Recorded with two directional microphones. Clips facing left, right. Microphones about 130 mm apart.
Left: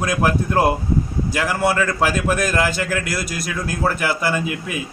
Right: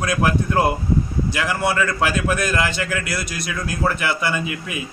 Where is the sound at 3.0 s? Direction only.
40° left (ahead or behind).